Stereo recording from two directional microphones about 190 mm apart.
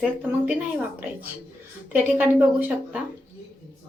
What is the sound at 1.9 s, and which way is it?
Speech, 10° right (ahead or behind).